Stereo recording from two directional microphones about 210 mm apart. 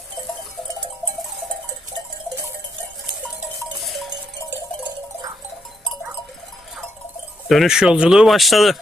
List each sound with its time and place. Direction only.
7.4 s speech: centre (ahead or behind)